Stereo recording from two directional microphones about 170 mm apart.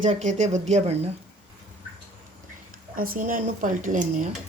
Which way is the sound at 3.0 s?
55° right (ahead or behind).